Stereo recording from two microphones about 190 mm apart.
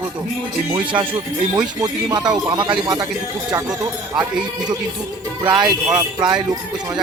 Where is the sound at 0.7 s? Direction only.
25° right (ahead or behind).